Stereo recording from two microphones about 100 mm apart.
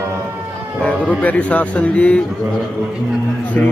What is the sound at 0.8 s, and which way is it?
A man's voice, 15° left (ahead or behind).